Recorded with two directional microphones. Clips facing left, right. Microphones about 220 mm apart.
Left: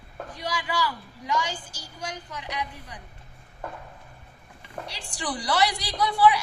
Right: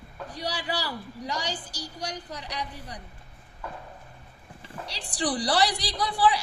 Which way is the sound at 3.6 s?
50° left (ahead or behind).